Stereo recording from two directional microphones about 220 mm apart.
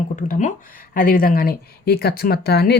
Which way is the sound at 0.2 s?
35° left (ahead or behind).